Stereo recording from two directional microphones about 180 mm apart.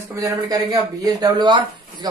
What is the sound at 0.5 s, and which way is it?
Speech, 20° right (ahead or behind).